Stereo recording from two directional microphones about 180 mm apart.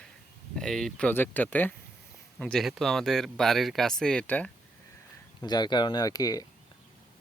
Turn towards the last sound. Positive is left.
turn(degrees=20)  # may be behind; listen again after turning